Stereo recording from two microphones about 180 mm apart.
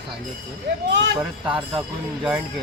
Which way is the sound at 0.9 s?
80° right.